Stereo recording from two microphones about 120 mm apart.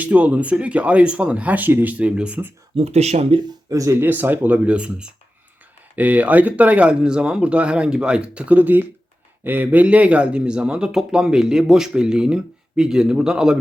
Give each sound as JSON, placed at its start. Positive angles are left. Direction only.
{"t": 0.0, "sound": "speech", "side_deg": -10}
{"t": 2.7, "sound": "speech", "side_deg": -60}
{"t": 3.7, "sound": "speech", "side_deg": -25}